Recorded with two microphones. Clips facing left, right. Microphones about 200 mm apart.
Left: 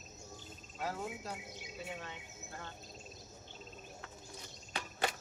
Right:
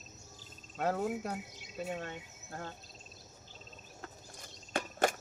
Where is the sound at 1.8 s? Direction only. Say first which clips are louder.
Right 7 dB; 45° right (ahead or behind).